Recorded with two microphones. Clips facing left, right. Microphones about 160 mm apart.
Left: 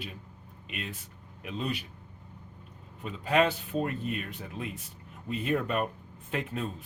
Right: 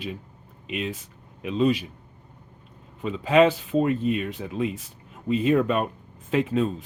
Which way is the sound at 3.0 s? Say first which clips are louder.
Right 8 dB; 90° right.